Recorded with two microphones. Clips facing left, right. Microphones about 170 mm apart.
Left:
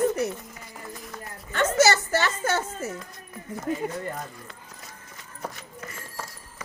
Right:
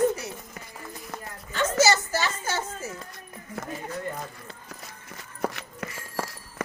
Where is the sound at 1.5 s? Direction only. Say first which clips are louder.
Left 2 dB; 60° left (ahead or behind).